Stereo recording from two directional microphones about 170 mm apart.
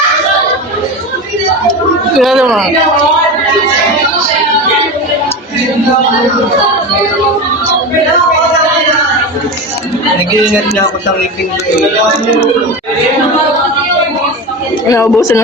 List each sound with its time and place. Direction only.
2.1 s speech: centre (ahead or behind)
14.8 s speech: 15° left (ahead or behind)